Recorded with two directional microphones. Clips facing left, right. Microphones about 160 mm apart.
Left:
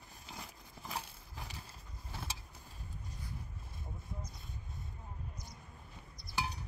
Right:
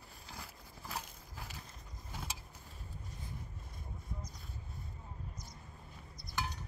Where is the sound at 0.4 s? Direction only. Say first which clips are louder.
Left 1 dB; 15° left (ahead or behind).